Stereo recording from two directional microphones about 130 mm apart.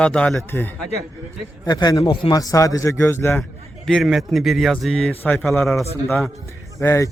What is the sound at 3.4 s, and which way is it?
A man's voice, 5° left (ahead or behind).